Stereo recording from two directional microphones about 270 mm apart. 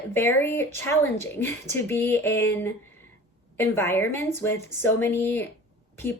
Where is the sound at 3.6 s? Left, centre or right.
Centre.